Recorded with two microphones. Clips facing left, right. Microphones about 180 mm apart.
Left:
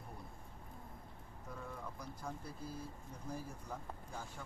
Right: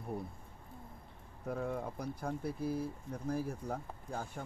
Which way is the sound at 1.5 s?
60° right (ahead or behind).